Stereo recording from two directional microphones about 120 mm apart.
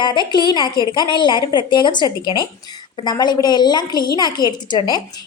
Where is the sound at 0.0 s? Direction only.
40° left (ahead or behind).